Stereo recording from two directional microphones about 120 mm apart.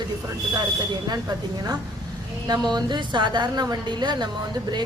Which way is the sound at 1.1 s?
35° right (ahead or behind).